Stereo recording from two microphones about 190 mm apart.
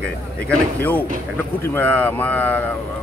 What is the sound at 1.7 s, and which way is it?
Speech, 10° left (ahead or behind).